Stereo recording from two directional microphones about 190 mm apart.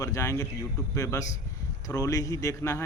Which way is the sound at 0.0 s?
15° left (ahead or behind).